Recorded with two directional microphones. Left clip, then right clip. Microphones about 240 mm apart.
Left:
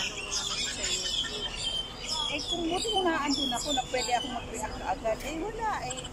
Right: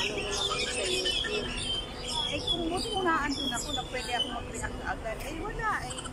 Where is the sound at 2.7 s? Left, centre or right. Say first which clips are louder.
Left 3 dB; centre.